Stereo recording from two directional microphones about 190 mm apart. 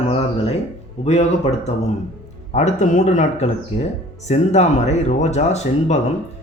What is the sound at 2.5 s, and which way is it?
Speech, 40° left (ahead or behind).